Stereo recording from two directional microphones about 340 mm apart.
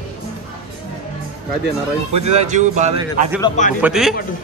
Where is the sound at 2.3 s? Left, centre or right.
Right.